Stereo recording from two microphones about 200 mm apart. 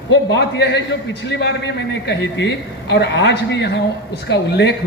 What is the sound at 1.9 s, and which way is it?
A man's voice, 60° left (ahead or behind).